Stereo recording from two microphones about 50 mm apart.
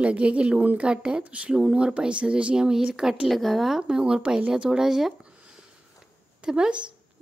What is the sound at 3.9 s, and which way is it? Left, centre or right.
Speech, centre.